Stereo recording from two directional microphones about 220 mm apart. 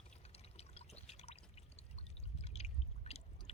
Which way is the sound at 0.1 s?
30° left (ahead or behind).